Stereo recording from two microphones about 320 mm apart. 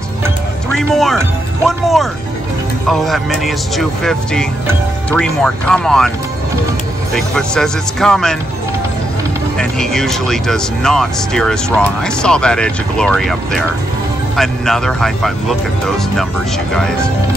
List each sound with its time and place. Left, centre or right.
0.7 s speech: centre
7.2 s speech: centre
9.6 s speech: centre